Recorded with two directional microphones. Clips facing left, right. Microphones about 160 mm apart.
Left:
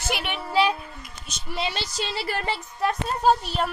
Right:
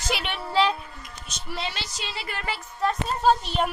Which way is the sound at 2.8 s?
10° left (ahead or behind).